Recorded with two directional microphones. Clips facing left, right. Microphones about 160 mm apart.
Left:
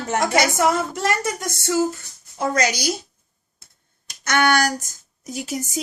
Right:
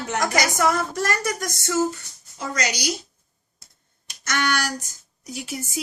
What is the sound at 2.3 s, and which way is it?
Speech, 55° left (ahead or behind).